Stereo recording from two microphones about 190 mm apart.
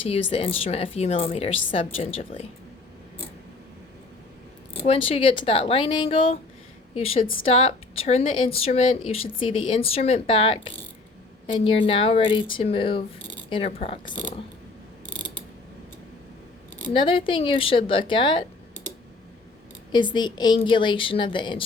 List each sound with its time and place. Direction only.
0.0 s a woman's voice: 30° left (ahead or behind)
5.0 s a woman's voice: 30° left (ahead or behind)
15.0 s mechanisms: 80° left
16.9 s a woman's voice: 25° left (ahead or behind)
19.9 s a woman's voice: 25° left (ahead or behind)